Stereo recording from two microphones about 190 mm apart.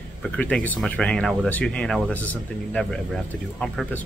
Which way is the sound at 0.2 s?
5° left (ahead or behind).